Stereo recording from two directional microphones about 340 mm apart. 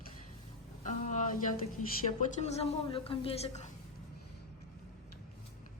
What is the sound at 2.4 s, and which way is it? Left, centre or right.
A woman's voice, centre.